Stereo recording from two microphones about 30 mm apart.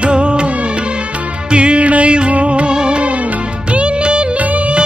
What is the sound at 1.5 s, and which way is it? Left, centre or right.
Music, right.